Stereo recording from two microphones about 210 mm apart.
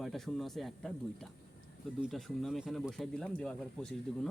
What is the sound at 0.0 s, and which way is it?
Speech, centre (ahead or behind).